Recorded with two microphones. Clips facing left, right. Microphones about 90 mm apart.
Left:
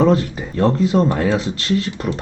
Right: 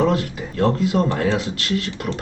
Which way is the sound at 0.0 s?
35° left (ahead or behind).